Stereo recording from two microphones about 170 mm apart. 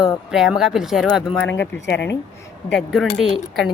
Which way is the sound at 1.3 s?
10° left (ahead or behind).